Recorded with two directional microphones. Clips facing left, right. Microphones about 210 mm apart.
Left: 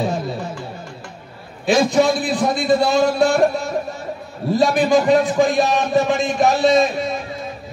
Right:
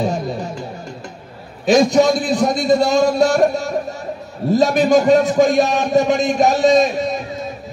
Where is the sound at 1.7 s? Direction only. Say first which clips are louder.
Right 3 dB; 40° right (ahead or behind).